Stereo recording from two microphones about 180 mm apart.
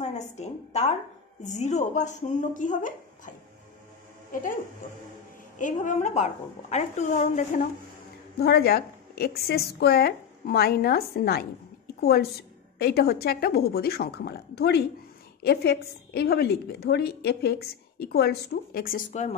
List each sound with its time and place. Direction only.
0.0 s a woman's voice: 40° left (ahead or behind)
5.6 s a woman's voice: 45° left (ahead or behind)
8.4 s a woman's voice: 60° left (ahead or behind); by 19.3 s 45° left (ahead or behind)